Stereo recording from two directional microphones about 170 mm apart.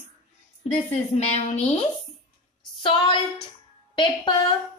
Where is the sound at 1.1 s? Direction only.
40° left (ahead or behind).